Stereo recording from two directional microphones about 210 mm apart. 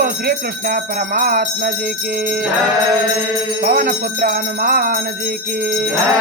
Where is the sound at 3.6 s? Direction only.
45° right (ahead or behind).